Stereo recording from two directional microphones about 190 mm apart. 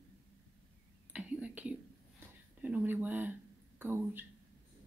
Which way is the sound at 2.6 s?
10° right (ahead or behind).